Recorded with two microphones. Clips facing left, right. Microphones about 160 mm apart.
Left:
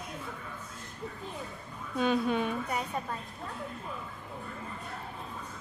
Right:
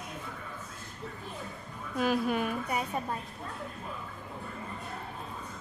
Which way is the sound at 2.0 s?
5° right (ahead or behind).